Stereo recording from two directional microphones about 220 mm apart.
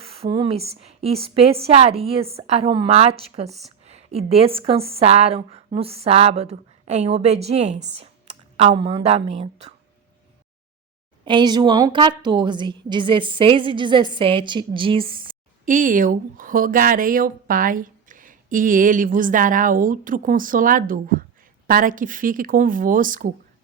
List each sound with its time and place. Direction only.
0.0 s a woman's voice: 25° right (ahead or behind)
11.3 s a woman's voice: 20° right (ahead or behind)
15.6 s speech: 35° right (ahead or behind)